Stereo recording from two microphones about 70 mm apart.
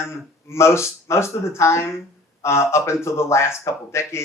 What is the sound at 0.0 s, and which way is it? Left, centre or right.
Speech, left.